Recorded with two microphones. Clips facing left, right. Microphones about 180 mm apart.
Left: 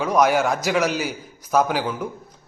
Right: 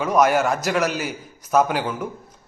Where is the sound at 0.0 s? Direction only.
Centre (ahead or behind).